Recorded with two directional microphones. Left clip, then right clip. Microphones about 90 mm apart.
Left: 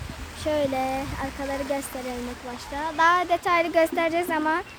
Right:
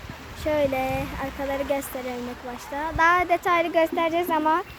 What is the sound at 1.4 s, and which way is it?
Speech, 20° right (ahead or behind).